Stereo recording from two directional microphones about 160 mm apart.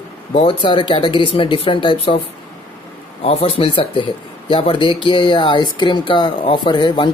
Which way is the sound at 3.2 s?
35° left (ahead or behind).